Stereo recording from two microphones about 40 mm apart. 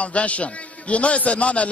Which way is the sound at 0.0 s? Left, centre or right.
Left.